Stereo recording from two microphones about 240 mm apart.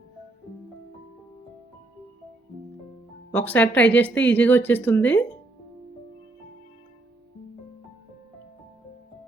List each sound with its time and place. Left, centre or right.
3.3 s speech: centre